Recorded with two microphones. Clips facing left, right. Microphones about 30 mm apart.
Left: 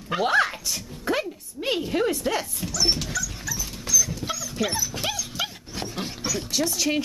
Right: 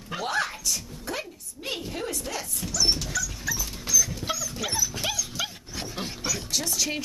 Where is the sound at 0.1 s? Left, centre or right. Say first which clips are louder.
Left 7 dB; left.